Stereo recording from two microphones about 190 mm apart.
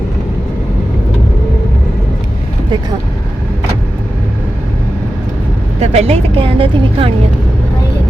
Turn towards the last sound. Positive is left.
turn(degrees=-30)  # may be behind; listen again after turning